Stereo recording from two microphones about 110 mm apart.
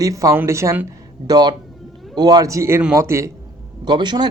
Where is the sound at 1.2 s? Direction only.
40° right (ahead or behind).